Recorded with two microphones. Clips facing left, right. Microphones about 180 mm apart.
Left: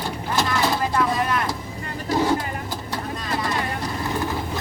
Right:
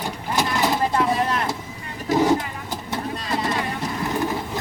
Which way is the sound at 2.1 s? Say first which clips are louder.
Right 3 dB; 20° right (ahead or behind).